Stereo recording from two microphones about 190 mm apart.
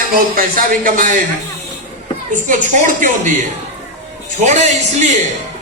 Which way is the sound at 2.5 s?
45° right (ahead or behind).